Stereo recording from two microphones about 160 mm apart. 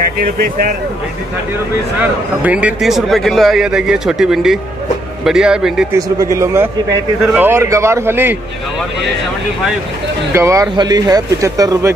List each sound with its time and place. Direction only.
0.0 s speech: 65° right (ahead or behind)
2.4 s speech: 10° right (ahead or behind)
5.9 s a man's voice: 20° right (ahead or behind)
10.3 s speech: 20° right (ahead or behind)